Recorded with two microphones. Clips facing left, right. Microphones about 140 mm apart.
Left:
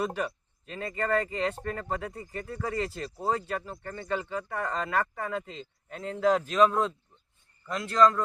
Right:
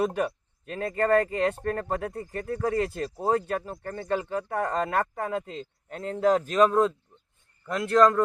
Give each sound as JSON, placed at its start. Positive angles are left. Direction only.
{"t": 0.0, "sound": "a man's voice", "side_deg": -50}